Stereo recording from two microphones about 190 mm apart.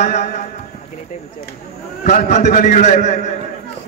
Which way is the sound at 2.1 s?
40° left (ahead or behind).